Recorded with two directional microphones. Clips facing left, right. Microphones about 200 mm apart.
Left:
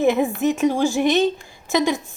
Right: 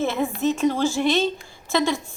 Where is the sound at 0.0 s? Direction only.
15° left (ahead or behind).